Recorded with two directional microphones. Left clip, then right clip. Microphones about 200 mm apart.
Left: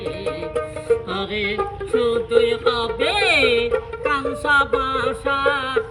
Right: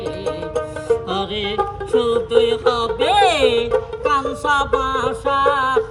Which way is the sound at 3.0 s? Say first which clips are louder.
Right 3 dB; 30° right (ahead or behind).